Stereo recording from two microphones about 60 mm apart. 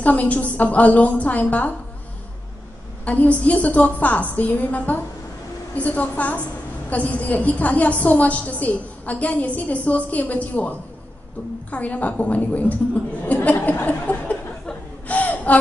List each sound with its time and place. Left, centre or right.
0.0 s a woman's voice: left
3.1 s a woman's voice: left
15.0 s gasp: left